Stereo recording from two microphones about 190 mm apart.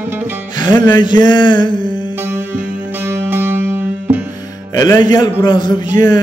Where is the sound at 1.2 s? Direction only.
25° left (ahead or behind).